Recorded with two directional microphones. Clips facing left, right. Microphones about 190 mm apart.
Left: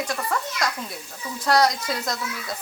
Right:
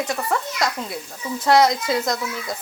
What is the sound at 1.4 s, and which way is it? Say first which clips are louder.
Speech: right 4 dB; 25° right (ahead or behind).